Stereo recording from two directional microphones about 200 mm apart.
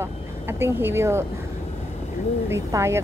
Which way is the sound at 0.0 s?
10° right (ahead or behind).